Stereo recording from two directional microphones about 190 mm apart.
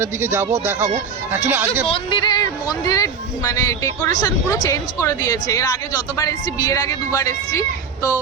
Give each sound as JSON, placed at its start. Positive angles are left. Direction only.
{"t": 0.0, "sound": "speech", "side_deg": -10}
{"t": 1.9, "sound": "speech", "side_deg": 25}